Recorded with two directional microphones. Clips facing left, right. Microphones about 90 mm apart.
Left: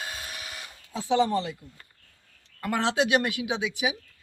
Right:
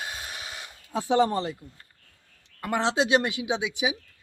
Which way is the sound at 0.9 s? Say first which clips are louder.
Right 1 dB; 50° right (ahead or behind).